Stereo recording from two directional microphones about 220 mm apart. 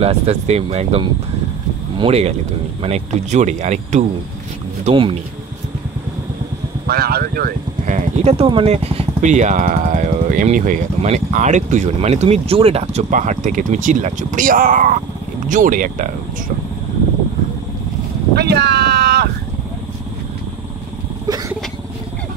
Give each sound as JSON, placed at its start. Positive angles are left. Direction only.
{"t": 0.0, "sound": "speech", "side_deg": -30}
{"t": 6.9, "sound": "speech", "side_deg": -45}
{"t": 18.3, "sound": "a sound", "side_deg": -50}
{"t": 21.3, "sound": "vehicle", "side_deg": -15}